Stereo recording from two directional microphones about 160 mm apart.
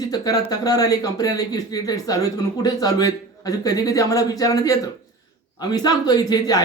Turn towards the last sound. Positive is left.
turn(degrees=25)  # may be behind; listen again after turning